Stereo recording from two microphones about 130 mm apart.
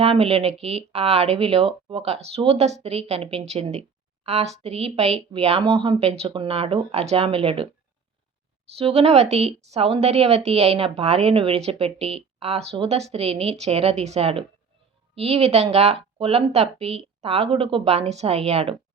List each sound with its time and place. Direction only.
0.0 s speech: 50° right (ahead or behind)
8.7 s speech: 50° right (ahead or behind)